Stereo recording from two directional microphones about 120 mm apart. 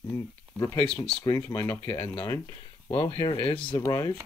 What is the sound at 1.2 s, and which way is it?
Speech, 30° left (ahead or behind).